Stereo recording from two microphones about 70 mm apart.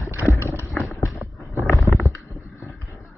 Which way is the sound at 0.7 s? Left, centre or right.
Centre.